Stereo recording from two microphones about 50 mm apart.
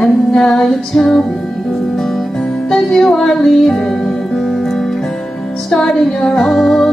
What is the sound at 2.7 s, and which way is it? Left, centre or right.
Music, centre.